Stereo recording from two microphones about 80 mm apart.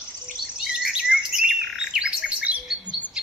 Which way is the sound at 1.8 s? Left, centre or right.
Centre.